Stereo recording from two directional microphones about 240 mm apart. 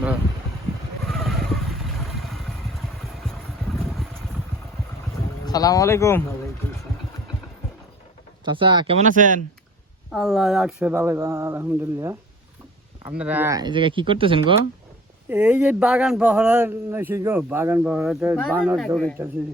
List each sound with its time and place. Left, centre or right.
1.0 s vehicle: centre
5.5 s speech: centre
8.4 s speech: centre
10.1 s speech: centre
13.1 s speech: centre; by 14.5 s right
15.3 s speech: centre
18.8 s speech: centre